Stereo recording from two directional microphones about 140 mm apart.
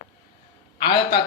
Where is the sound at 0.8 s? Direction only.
30° left (ahead or behind).